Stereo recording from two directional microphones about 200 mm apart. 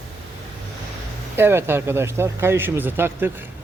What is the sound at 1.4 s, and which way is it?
Speech, 10° right (ahead or behind).